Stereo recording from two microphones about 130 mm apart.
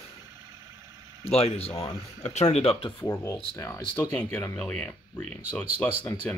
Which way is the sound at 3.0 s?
20° left (ahead or behind).